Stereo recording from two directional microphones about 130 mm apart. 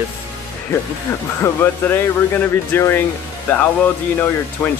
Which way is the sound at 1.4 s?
15° left (ahead or behind).